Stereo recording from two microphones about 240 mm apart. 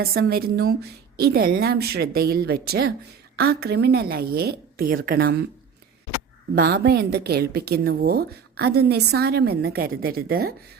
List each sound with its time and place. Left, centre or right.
0.0 s a woman's voice: right
6.6 s a woman's voice: right